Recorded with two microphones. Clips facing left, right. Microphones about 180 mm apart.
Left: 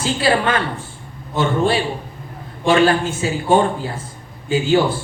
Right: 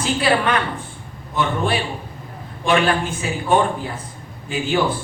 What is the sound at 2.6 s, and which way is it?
A man's voice, 30° left (ahead or behind).